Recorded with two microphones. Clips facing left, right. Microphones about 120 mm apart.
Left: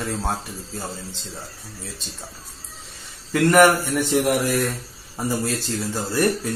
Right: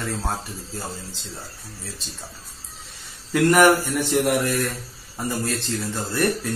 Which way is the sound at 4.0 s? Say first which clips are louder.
Left 1 dB; centre (ahead or behind).